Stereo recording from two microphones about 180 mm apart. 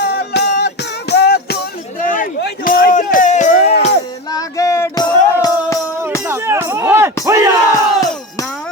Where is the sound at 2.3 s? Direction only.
55° left (ahead or behind).